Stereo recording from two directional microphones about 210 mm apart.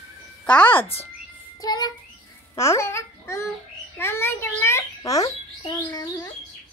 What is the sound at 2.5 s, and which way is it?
A child's voice, 15° left (ahead or behind).